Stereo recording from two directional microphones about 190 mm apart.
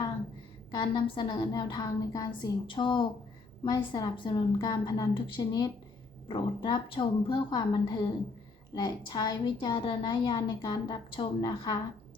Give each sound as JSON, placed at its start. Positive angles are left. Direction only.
{"t": 0.7, "sound": "a woman's voice", "side_deg": 20}